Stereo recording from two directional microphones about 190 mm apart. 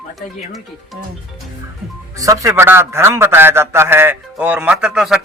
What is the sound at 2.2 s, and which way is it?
A man's voice, 15° right (ahead or behind).